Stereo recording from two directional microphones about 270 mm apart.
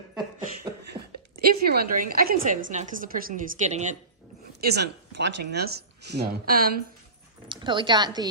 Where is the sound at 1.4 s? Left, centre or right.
Right.